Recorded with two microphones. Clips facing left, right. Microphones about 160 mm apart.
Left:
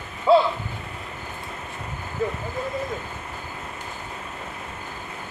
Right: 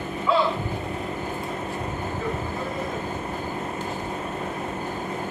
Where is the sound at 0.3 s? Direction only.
30° left (ahead or behind).